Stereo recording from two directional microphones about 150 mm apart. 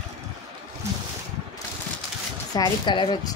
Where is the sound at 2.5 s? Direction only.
30° left (ahead or behind).